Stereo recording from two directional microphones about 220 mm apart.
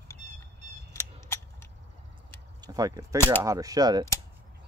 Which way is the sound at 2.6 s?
15° right (ahead or behind).